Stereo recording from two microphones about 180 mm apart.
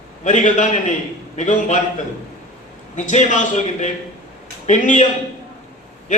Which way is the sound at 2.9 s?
40° left (ahead or behind).